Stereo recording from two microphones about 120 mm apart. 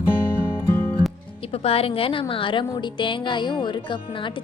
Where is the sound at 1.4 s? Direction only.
55° left (ahead or behind).